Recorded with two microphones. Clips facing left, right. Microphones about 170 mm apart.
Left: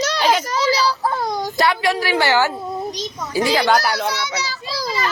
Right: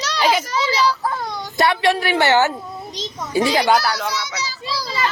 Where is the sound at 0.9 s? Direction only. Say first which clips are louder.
Left 2 dB; 30° left (ahead or behind).